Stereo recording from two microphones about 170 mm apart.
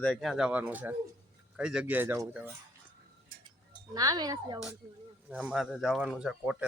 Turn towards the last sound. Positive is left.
turn(degrees=-5)  # may be behind; listen again after turning